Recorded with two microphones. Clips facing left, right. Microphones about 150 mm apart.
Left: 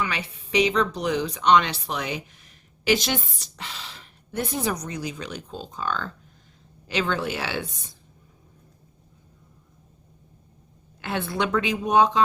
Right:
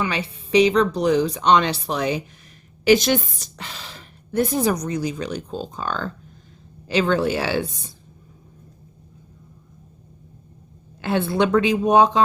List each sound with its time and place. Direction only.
0.0 s a woman's voice: 30° right (ahead or behind)
2.8 s a woman's voice: 45° right (ahead or behind)
11.0 s a woman's voice: 30° right (ahead or behind)